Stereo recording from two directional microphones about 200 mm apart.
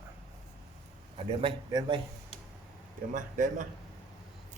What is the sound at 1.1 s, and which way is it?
Speech, 25° right (ahead or behind).